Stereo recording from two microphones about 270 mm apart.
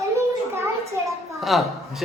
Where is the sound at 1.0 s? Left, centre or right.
Centre.